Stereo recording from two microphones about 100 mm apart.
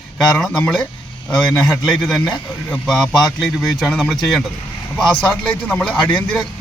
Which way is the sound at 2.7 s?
5° left (ahead or behind).